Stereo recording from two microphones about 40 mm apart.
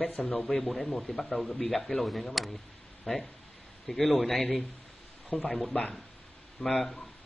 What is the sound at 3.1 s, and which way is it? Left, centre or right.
Speech, centre.